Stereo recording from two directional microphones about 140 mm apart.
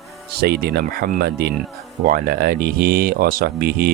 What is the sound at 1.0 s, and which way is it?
Speech, 90° right.